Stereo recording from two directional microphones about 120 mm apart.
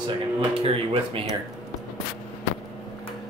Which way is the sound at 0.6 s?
50° right (ahead or behind).